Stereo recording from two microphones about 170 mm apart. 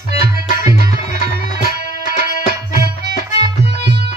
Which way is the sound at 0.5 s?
50° left (ahead or behind).